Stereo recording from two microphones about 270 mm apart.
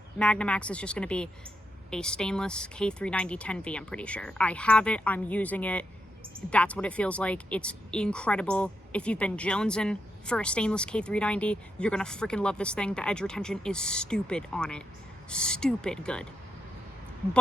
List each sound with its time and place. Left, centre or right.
0.2 s speech: centre